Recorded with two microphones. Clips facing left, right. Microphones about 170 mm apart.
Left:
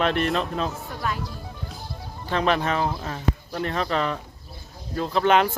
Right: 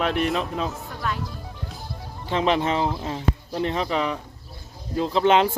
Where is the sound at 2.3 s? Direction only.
20° right (ahead or behind).